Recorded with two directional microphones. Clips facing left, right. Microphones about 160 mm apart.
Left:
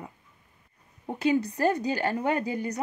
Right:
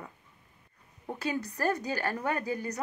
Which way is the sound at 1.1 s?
20° left (ahead or behind).